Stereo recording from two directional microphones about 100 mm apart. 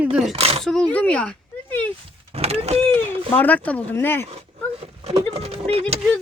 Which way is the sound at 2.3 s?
90° right.